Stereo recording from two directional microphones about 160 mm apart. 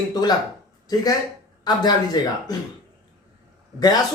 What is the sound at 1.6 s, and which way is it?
Speech, 25° left (ahead or behind).